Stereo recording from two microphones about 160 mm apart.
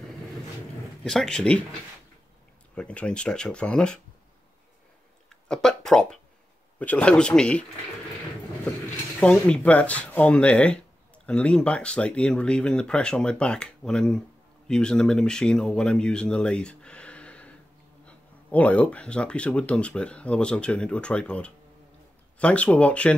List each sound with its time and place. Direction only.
1.0 s speech: 5° left (ahead or behind)
5.3 s speech: 5° left (ahead or behind)
9.2 s speech: 5° left (ahead or behind)